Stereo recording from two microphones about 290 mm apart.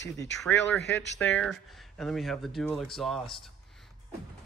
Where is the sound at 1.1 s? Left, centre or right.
Centre.